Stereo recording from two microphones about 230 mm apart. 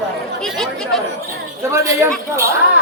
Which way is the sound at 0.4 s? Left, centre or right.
Centre.